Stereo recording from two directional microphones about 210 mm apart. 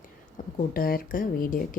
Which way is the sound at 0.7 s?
45° left (ahead or behind).